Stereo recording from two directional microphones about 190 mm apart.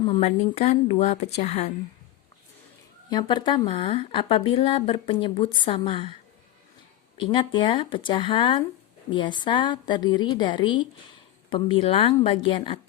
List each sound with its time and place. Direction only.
0.0 s speech: 30° left (ahead or behind)
3.1 s a woman's voice: 25° left (ahead or behind)
7.2 s a woman's voice: 25° left (ahead or behind)